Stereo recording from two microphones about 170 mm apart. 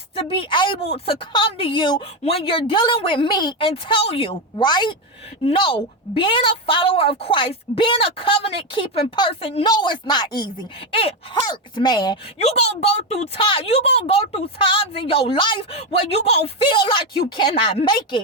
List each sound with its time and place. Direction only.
0.2 s a woman's voice: 30° left (ahead or behind)
12.4 s a woman's voice: 40° left (ahead or behind)